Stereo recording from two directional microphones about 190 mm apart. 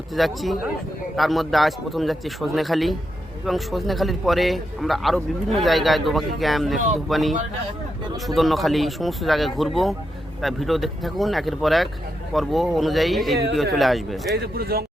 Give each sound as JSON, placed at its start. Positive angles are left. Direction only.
{"t": 0.1, "sound": "a man's voice", "side_deg": 0}
{"t": 8.4, "sound": "a man's voice", "side_deg": 0}
{"t": 14.3, "sound": "speech", "side_deg": -55}